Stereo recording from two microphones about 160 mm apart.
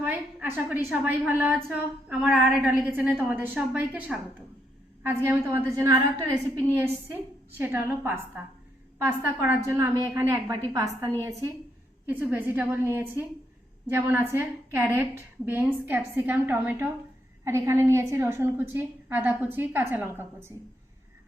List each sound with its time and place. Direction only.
0.0 s a woman's voice: 10° right (ahead or behind)
12.0 s a woman's voice: 10° right (ahead or behind)